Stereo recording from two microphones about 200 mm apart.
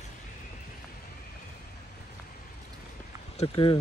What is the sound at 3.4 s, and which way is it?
Speech, 25° left (ahead or behind).